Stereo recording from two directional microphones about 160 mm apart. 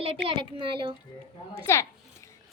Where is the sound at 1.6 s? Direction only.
15° left (ahead or behind).